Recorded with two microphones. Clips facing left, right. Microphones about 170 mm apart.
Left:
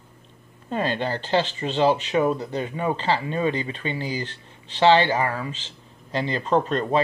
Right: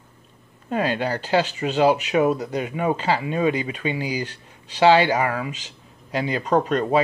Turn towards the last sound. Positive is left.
turn(degrees=-15)  # may be behind; listen again after turning